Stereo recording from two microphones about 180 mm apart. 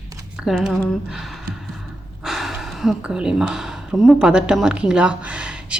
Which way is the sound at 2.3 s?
Centre (ahead or behind).